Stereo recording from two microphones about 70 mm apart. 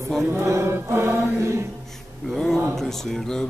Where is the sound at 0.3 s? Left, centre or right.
Right.